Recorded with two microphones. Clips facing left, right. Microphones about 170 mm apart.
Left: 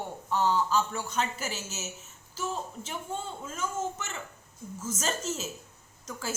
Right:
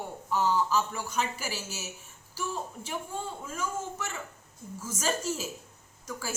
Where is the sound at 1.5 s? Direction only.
20° left (ahead or behind).